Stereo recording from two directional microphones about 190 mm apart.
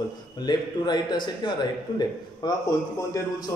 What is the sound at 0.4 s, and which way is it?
A man's voice, 20° left (ahead or behind).